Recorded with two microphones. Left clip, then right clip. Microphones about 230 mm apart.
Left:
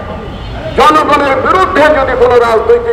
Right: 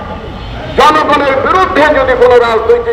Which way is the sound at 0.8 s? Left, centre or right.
Left.